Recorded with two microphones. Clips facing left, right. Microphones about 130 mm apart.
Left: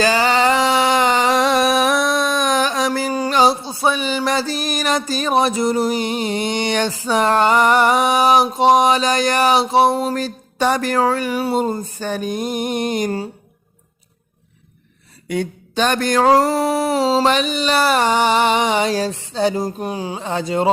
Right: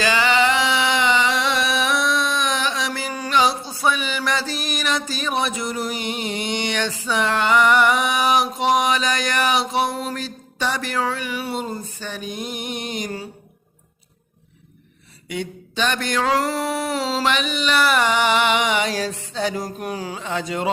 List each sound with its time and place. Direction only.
0.0 s a sound: 40° left (ahead or behind)
15.3 s mantra: 45° left (ahead or behind); by 20.2 s 25° left (ahead or behind)
20.2 s mantra: 35° left (ahead or behind)